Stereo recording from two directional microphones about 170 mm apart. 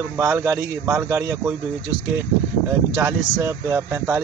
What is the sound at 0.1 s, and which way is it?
Speech, 15° right (ahead or behind).